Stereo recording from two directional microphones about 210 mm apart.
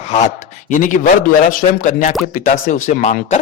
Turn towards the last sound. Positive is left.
turn(degrees=40)  # may be behind; listen again after turning